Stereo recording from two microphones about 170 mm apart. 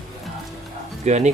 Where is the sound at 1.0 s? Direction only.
40° right (ahead or behind).